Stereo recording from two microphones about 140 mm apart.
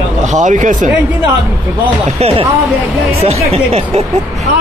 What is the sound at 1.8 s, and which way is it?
Speech, 40° right (ahead or behind).